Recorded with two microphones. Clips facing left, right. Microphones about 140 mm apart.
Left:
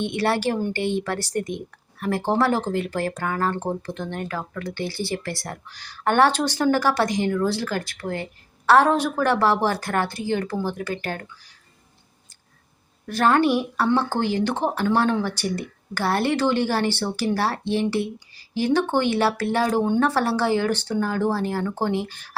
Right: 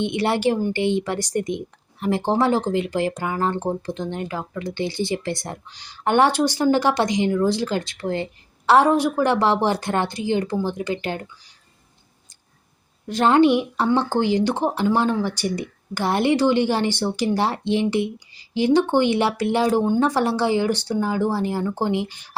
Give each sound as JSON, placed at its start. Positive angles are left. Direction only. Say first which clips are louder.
{"t": 0.0, "sound": "a woman's voice", "louder": "right 2 dB", "side_deg": -15}
{"t": 13.1, "sound": "a woman's voice", "louder": "right 3 dB", "side_deg": -20}